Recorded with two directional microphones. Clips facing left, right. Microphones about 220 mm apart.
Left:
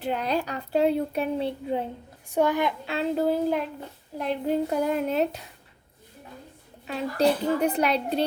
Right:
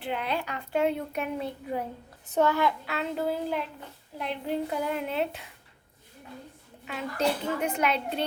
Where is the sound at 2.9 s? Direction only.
35° left (ahead or behind).